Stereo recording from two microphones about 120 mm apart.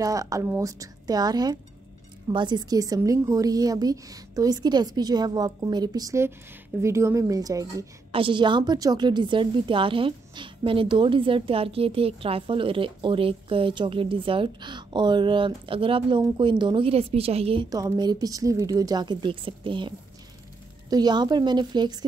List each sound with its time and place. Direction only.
0.0 s a woman's voice: 30° right (ahead or behind)
8.1 s a woman's voice: 45° right (ahead or behind)
17.6 s a woman's voice: 30° right (ahead or behind)
20.9 s a woman's voice: 35° right (ahead or behind)